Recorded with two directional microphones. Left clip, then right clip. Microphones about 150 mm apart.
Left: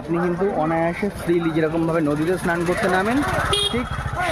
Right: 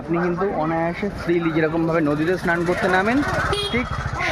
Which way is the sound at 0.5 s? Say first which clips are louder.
Left 1 dB; 15° left (ahead or behind).